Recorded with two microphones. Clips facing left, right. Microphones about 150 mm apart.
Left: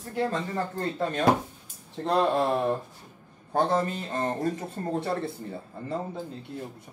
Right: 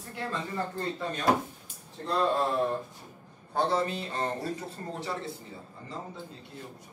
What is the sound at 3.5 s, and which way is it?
A man's voice, 50° left (ahead or behind).